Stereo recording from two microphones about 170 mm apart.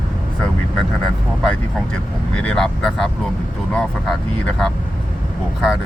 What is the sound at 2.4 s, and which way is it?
Speech, 5° left (ahead or behind).